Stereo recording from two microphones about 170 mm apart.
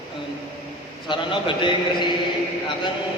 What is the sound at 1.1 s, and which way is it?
A man's voice, 30° left (ahead or behind).